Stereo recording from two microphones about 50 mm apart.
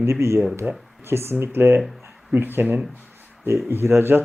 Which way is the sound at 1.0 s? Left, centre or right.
Right.